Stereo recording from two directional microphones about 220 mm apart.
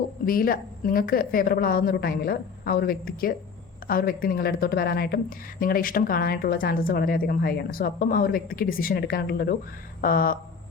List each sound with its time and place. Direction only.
0.3 s speech: 40° left (ahead or behind)